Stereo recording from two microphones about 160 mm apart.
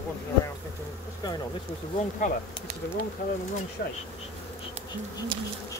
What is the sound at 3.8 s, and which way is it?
Bee, 70° left (ahead or behind).